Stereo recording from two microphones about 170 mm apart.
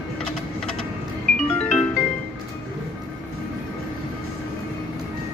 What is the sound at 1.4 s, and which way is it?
Music, 10° left (ahead or behind).